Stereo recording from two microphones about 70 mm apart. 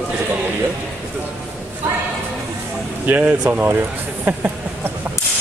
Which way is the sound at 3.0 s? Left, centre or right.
Right.